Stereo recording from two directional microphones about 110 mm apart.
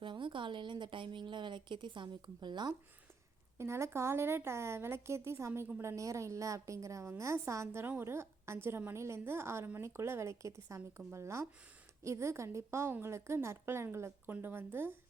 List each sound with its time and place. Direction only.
0.0 s speech: 50° right (ahead or behind)
3.6 s a woman's voice: 25° right (ahead or behind)